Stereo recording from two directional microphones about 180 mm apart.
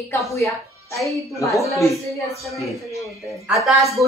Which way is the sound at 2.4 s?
Centre (ahead or behind).